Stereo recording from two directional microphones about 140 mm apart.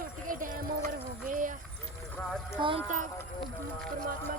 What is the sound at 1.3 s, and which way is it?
Clip-clop, 70° right (ahead or behind).